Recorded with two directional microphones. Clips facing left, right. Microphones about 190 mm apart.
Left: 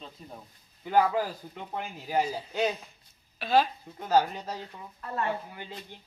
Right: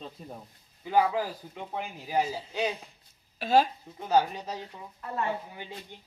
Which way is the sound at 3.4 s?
45° right (ahead or behind).